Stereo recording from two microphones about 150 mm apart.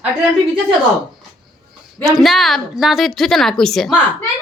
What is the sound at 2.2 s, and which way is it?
A woman's voice, centre (ahead or behind).